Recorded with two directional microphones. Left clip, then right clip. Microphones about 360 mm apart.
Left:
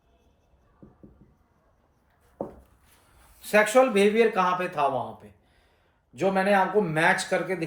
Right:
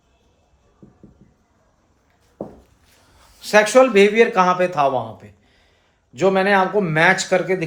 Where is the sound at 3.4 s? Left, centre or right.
Centre.